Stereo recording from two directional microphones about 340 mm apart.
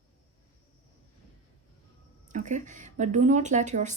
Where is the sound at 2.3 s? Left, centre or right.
Right.